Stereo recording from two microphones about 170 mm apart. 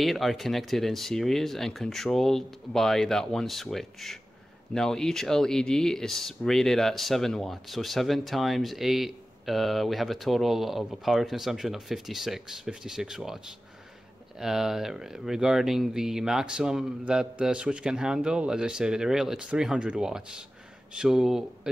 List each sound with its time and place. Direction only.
0.0 s speech: centre (ahead or behind)
14.4 s speech: centre (ahead or behind)